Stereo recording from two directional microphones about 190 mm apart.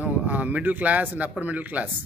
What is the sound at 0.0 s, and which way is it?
Speech, 10° right (ahead or behind).